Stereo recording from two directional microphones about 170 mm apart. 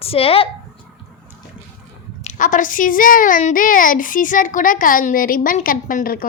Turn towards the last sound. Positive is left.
turn(degrees=55)  # may be behind; listen again after turning